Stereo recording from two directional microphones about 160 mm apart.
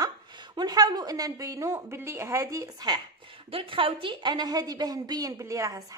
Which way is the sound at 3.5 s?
35° right (ahead or behind).